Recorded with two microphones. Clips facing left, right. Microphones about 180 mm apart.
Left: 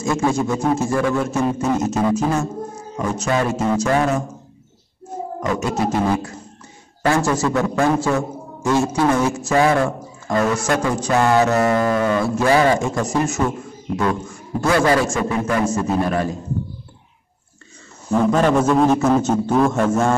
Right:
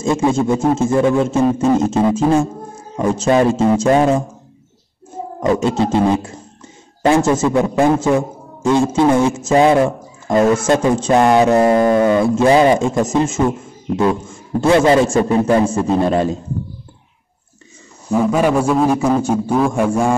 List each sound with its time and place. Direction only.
0.0 s speech: 25° right (ahead or behind)
5.4 s a man's voice: 25° right (ahead or behind)
14.6 s speech: 25° right (ahead or behind)
18.1 s a man's voice: 10° right (ahead or behind)